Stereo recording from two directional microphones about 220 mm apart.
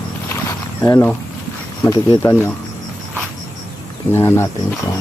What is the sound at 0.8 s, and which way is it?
Speech, 15° left (ahead or behind).